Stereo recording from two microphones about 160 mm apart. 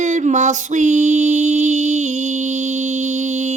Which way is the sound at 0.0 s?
50° right (ahead or behind).